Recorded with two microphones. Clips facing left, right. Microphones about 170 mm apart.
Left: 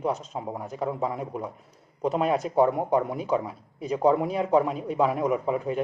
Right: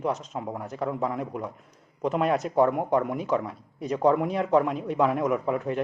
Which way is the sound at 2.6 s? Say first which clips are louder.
Even; 15° left (ahead or behind).